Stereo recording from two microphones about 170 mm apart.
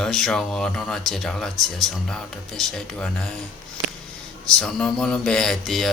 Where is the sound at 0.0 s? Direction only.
Centre (ahead or behind).